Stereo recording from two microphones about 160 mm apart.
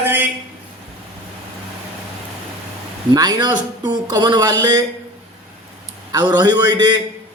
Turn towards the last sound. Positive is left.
turn(degrees=-25)  # may be behind; listen again after turning